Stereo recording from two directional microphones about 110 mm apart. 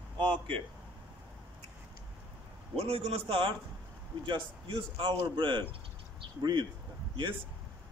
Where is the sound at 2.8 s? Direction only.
65° right (ahead or behind); by 6.7 s 40° right (ahead or behind).